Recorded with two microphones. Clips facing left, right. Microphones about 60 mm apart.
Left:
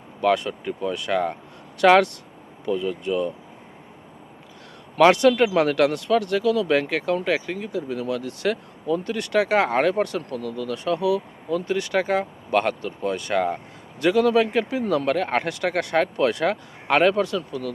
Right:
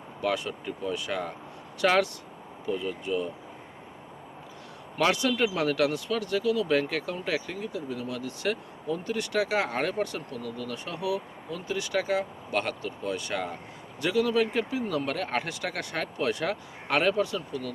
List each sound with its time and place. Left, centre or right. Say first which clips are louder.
0.2 s speech: left 8 dB; left
4.9 s speech: left 9 dB; left
14.0 s speech: left 7 dB; left